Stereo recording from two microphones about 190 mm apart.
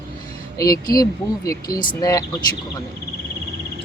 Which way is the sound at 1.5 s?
20° left (ahead or behind).